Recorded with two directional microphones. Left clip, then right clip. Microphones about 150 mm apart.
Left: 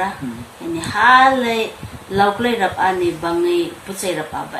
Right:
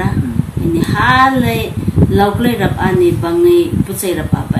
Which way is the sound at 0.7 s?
20° left (ahead or behind).